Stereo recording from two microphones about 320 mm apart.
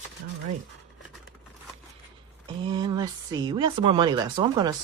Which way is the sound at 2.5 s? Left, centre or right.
Centre.